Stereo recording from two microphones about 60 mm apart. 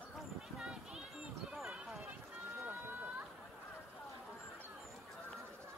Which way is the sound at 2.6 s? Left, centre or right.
Right.